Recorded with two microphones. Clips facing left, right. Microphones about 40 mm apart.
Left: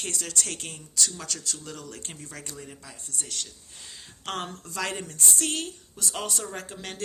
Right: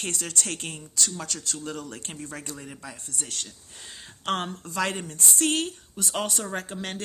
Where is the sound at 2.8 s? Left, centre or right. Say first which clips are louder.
Right 2 dB; right.